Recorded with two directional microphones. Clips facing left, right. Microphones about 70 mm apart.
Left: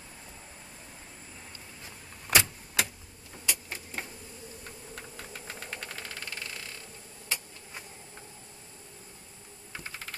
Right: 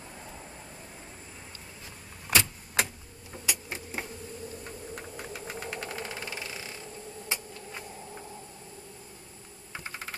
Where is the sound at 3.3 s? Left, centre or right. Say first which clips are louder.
Right 1 dB; centre.